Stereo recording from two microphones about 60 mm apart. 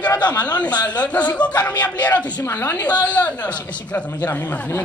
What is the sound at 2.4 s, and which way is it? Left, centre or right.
Speech, left.